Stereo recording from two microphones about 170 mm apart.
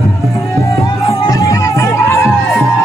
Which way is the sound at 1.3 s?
20° left (ahead or behind).